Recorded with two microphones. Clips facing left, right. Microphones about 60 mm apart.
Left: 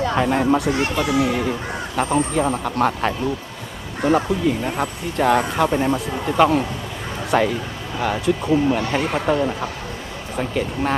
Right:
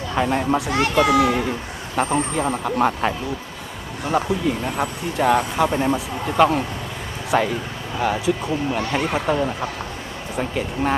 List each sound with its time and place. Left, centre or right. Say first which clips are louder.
0.2 s speech: even; centre
0.7 s a child's voice: right 3 dB; right
1.3 s speech: left 1 dB; centre